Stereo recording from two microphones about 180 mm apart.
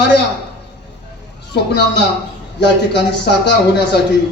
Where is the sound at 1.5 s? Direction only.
70° left (ahead or behind).